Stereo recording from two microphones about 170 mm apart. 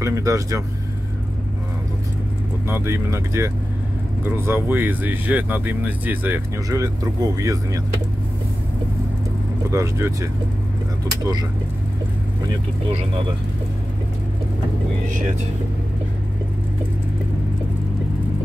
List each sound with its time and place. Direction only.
0.0 s speech: 20° right (ahead or behind)
2.7 s speech: 15° right (ahead or behind)
9.7 s speech: 15° right (ahead or behind)